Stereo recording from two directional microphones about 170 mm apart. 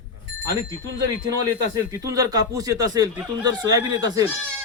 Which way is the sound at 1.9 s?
20° right (ahead or behind).